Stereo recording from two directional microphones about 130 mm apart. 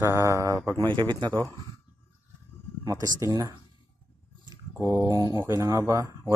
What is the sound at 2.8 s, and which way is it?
Speech, 25° right (ahead or behind).